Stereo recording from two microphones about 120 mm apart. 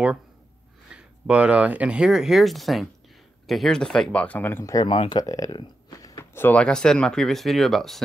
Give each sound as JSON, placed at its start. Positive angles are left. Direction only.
{"t": 0.9, "sound": "speech", "side_deg": -10}
{"t": 4.7, "sound": "speech", "side_deg": 45}
{"t": 5.2, "sound": "a sound", "side_deg": 30}
{"t": 6.3, "sound": "speech", "side_deg": 15}